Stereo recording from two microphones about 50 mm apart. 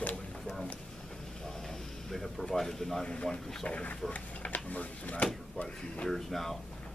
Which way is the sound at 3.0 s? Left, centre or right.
Centre.